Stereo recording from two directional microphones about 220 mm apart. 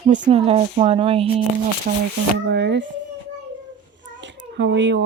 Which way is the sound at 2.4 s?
55° right (ahead or behind).